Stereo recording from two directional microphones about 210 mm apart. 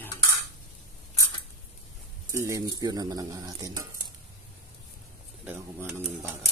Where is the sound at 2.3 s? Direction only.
15° right (ahead or behind).